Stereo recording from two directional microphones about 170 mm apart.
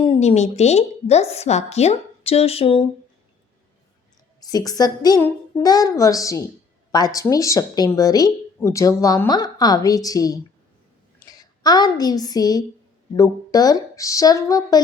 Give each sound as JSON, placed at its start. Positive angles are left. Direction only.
{"t": 0.0, "sound": "a woman's voice", "side_deg": 35}
{"t": 4.4, "sound": "a woman's voice", "side_deg": 20}